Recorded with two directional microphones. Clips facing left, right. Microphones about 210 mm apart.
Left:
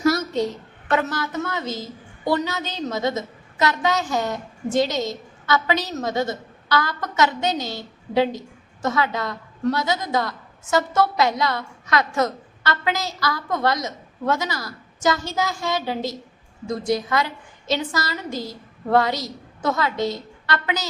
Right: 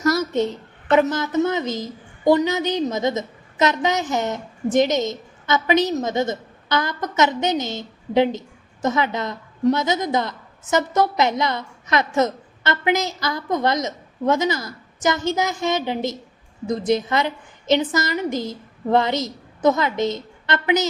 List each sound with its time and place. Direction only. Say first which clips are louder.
0.9 s a woman's voice: right 5 dB; 20° right (ahead or behind)